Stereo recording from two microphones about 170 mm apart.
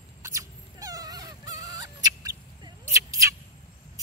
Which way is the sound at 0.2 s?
20° right (ahead or behind).